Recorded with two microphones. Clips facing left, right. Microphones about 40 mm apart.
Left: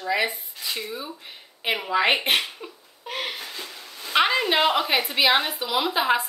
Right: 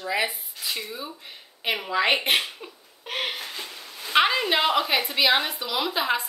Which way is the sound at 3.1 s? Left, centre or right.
Right.